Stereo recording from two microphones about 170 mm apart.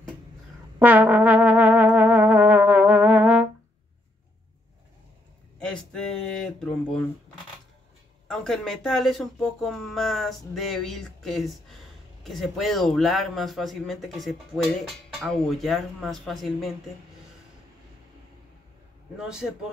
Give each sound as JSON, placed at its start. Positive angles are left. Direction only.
{"t": 0.7, "sound": "music", "side_deg": -10}
{"t": 5.6, "sound": "a sound", "side_deg": 5}
{"t": 8.3, "sound": "speech", "side_deg": 5}
{"t": 19.1, "sound": "speech", "side_deg": -5}